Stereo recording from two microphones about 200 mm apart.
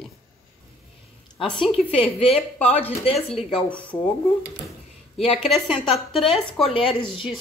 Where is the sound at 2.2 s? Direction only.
30° left (ahead or behind).